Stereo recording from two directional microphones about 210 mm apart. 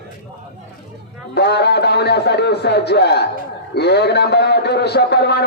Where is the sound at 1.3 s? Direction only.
50° left (ahead or behind).